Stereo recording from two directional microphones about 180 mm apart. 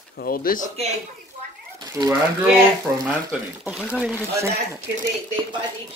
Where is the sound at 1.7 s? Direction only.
20° right (ahead or behind).